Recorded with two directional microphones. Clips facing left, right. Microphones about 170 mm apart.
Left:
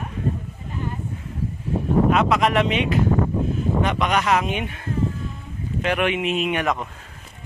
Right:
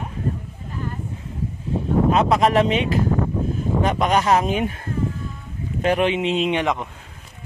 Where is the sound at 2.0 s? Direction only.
30° right (ahead or behind).